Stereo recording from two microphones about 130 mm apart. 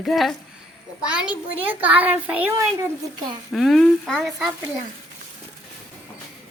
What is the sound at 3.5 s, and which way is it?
Speech, centre (ahead or behind).